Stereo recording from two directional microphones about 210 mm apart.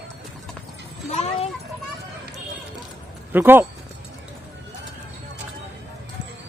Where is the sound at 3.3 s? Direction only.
10° right (ahead or behind).